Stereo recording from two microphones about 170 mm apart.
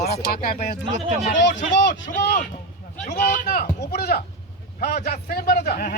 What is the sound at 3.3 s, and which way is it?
A man's voice, 55° left (ahead or behind).